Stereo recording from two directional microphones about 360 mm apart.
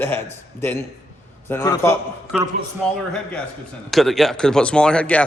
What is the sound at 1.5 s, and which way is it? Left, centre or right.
Speech, centre.